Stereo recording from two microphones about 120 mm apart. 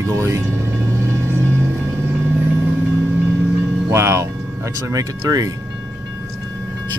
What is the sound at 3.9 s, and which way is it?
Music, 25° right (ahead or behind).